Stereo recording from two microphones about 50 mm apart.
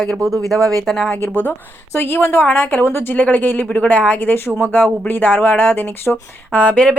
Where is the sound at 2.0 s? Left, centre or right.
Left.